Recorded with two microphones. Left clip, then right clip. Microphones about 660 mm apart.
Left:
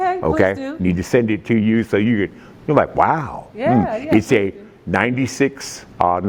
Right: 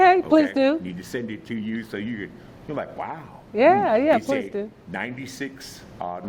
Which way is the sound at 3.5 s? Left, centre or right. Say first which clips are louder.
Right 2 dB; right.